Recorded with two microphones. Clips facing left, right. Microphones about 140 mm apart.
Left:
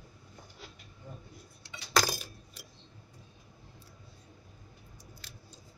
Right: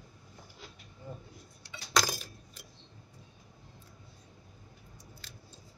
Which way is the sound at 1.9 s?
5° left (ahead or behind).